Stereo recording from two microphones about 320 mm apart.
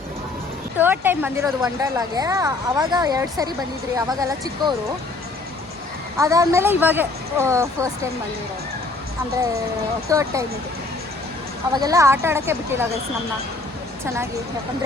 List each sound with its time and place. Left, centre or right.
0.8 s speech: centre
6.1 s speech: centre
10.1 s speech: centre
11.7 s speech: centre